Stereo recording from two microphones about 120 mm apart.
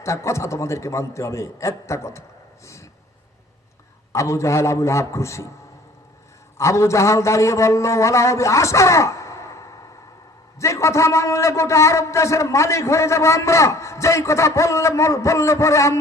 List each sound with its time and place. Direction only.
0.0 s a man's voice: 25° left (ahead or behind)
4.1 s a man's voice: 25° left (ahead or behind)
6.6 s a man's voice: 25° left (ahead or behind)